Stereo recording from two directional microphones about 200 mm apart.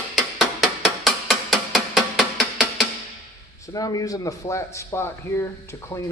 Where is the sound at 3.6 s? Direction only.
15° left (ahead or behind).